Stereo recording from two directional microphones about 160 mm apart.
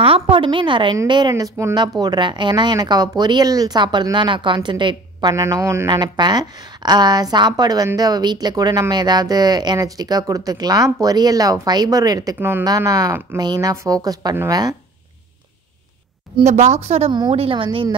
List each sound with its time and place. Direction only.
0.0 s a woman's voice: 35° right (ahead or behind)
5.3 s speech: 20° right (ahead or behind)
16.3 s a woman's voice: 45° right (ahead or behind)